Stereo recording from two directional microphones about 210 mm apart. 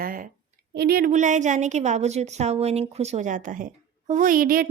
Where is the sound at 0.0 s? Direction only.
40° right (ahead or behind).